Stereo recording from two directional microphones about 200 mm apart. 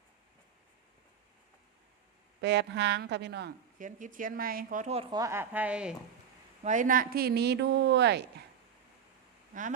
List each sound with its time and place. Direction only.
2.4 s speech: 60° right (ahead or behind)
3.8 s speech: 40° right (ahead or behind)
5.1 s a woman's voice: 15° right (ahead or behind)
6.7 s speech: 40° right (ahead or behind); by 8.2 s 60° right (ahead or behind)